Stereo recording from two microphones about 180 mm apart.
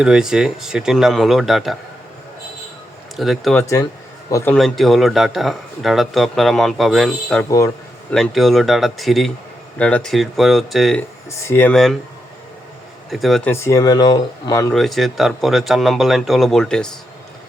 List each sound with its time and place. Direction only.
0.0 s a man's voice: 5° right (ahead or behind)
3.2 s a man's voice: centre (ahead or behind)
3.6 s speech: 15° left (ahead or behind)
4.5 s a man's voice: centre (ahead or behind)
11.3 s speech: 15° left (ahead or behind)
13.1 s speech: centre (ahead or behind)
13.5 s speech: 15° left (ahead or behind)
14.7 s a man's voice: centre (ahead or behind)